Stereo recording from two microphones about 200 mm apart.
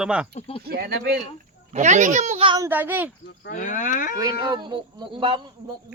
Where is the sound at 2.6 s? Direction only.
10° right (ahead or behind).